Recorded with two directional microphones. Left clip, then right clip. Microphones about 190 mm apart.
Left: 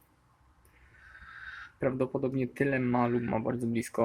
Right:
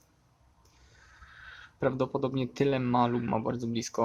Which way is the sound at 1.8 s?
20° right (ahead or behind).